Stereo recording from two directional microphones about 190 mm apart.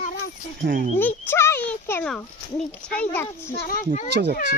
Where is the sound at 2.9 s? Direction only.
10° left (ahead or behind).